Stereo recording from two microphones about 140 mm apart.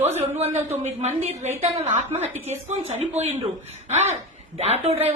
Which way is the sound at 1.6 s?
50° right (ahead or behind).